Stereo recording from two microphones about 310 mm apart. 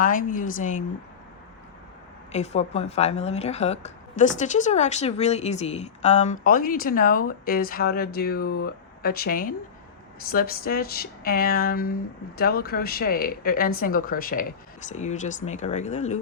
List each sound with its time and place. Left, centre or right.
0.0 s speech: left
2.3 s speech: left